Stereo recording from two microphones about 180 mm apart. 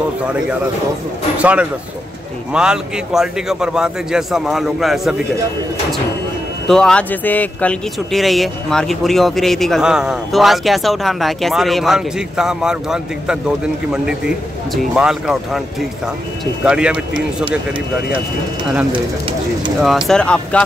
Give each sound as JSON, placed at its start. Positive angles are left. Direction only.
{"t": 0.2, "sound": "speech", "side_deg": -5}
{"t": 6.7, "sound": "speech", "side_deg": 5}
{"t": 18.9, "sound": "speech", "side_deg": -30}
{"t": 20.1, "sound": "speech", "side_deg": 5}